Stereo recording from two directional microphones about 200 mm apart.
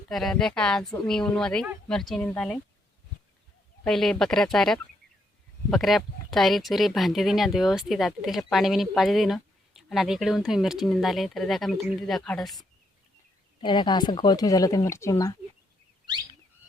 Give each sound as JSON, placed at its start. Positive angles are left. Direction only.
{"t": 0.1, "sound": "speech", "side_deg": 0}
{"t": 3.8, "sound": "speech", "side_deg": 0}
{"t": 13.6, "sound": "speech", "side_deg": 20}